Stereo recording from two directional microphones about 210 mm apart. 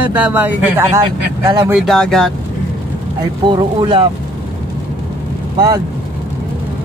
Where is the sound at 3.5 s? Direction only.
20° right (ahead or behind).